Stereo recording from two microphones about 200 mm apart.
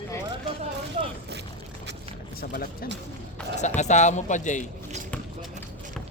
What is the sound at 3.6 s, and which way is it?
Speech, 35° left (ahead or behind).